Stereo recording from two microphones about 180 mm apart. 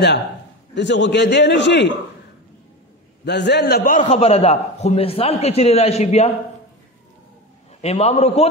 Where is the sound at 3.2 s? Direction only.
70° left (ahead or behind); by 6.3 s 35° left (ahead or behind).